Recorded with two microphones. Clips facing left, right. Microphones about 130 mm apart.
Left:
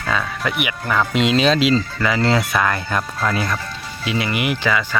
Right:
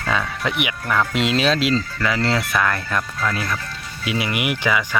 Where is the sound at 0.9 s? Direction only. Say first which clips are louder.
Left 3 dB; centre (ahead or behind).